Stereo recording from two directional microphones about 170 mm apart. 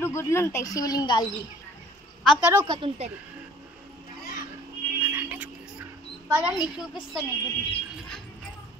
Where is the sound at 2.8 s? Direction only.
35° right (ahead or behind).